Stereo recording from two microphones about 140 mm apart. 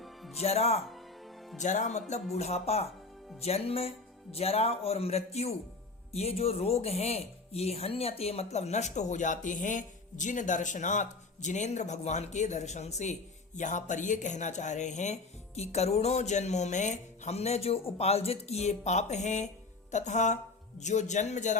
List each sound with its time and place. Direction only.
0.0 s music: centre (ahead or behind)
0.3 s speech: 50° left (ahead or behind)
1.5 s a man's voice: 60° left (ahead or behind)